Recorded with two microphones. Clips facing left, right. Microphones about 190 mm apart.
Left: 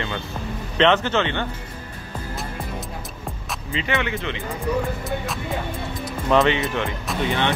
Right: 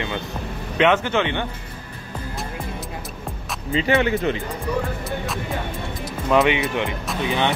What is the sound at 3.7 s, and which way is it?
Speech, 35° right (ahead or behind).